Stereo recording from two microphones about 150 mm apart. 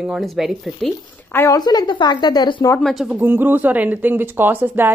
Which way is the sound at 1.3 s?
15° left (ahead or behind).